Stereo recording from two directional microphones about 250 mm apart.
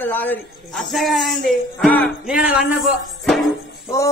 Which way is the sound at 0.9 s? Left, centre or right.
Centre.